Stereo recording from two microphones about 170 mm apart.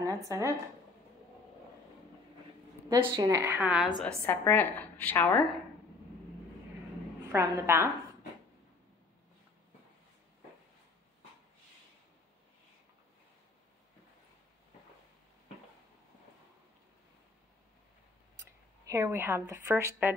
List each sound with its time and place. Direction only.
0.0 s speech: 20° right (ahead or behind)
2.9 s a woman's voice: 25° right (ahead or behind); by 3.9 s 5° right (ahead or behind)
4.3 s a woman's voice: 10° left (ahead or behind)
7.3 s a woman's voice: 15° right (ahead or behind)
18.9 s a woman's voice: 15° right (ahead or behind)